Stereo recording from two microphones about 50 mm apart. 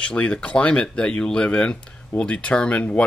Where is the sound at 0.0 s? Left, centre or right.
Left.